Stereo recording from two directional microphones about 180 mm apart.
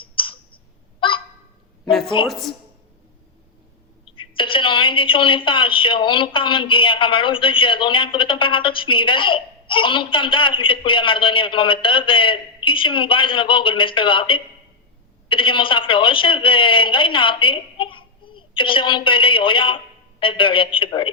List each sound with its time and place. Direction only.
0.0 s clicking: 30° left (ahead or behind)
0.9 s goose: 30° left (ahead or behind)
1.8 s a woman's voice: centre (ahead or behind)
4.1 s a woman's voice: 30° left (ahead or behind)